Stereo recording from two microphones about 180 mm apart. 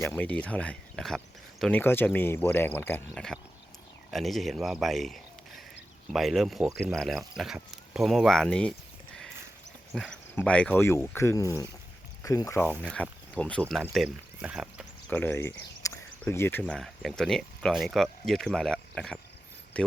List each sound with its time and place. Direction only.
0.0 s speech: 10° left (ahead or behind)
9.9 s speech: 5° left (ahead or behind)
12.8 s speech: 5° left (ahead or behind)
13.9 s speech: 5° right (ahead or behind)
15.1 s speech: 10° left (ahead or behind)